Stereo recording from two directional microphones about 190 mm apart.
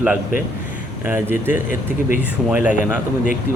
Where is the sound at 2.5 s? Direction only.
10° right (ahead or behind).